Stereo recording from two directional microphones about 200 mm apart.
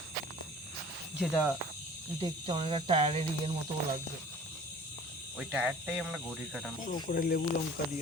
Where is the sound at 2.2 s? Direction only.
25° right (ahead or behind).